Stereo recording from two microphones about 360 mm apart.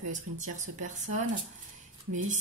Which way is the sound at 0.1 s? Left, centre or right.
Centre.